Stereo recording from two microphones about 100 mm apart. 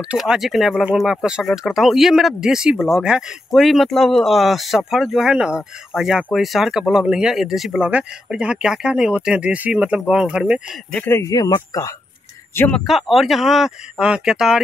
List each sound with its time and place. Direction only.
0.1 s speech: 5° right (ahead or behind)
11.1 s speech: 25° left (ahead or behind)
11.3 s speech: 35° left (ahead or behind)
12.7 s speech: centre (ahead or behind)